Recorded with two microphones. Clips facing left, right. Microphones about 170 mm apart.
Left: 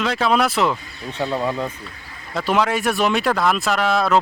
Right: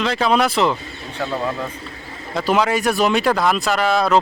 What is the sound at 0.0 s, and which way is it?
Speech, centre (ahead or behind).